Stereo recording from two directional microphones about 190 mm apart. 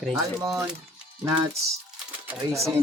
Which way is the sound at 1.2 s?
15° right (ahead or behind).